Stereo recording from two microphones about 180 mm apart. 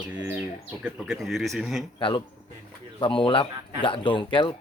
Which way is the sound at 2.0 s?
30° left (ahead or behind).